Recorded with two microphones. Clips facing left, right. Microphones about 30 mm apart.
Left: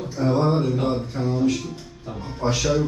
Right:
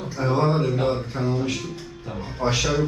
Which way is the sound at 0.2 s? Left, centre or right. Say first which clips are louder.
Left 1 dB; right.